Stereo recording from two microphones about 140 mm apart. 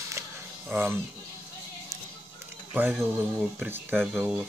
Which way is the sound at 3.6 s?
15° right (ahead or behind).